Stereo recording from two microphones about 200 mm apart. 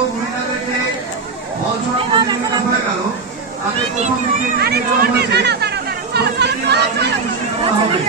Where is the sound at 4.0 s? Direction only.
45° right (ahead or behind).